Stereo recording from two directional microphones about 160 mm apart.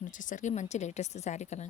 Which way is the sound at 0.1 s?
55° left (ahead or behind).